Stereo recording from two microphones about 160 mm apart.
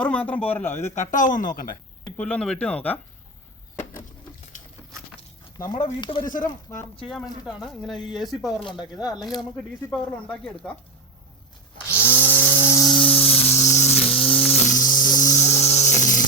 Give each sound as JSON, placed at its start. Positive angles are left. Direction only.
{"t": 0.0, "sound": "speech", "side_deg": 10}
{"t": 0.9, "sound": "speech", "side_deg": 45}
{"t": 2.0, "sound": "speech", "side_deg": 10}
{"t": 5.5, "sound": "speech", "side_deg": 25}
{"t": 6.2, "sound": "speech", "side_deg": 55}
{"t": 6.7, "sound": "speech", "side_deg": 20}
{"t": 7.1, "sound": "speech", "side_deg": 0}
{"t": 8.8, "sound": "speech", "side_deg": 25}
{"t": 9.2, "sound": "speech", "side_deg": 0}
{"t": 11.9, "sound": "a sound", "side_deg": -10}
{"t": 13.1, "sound": "a sound", "side_deg": 35}
{"t": 14.3, "sound": "a sound", "side_deg": 5}
{"t": 14.5, "sound": "a sound", "side_deg": 50}